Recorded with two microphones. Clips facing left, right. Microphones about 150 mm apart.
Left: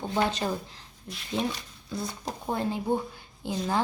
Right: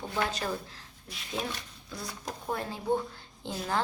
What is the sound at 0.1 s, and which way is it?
Speech, 20° left (ahead or behind).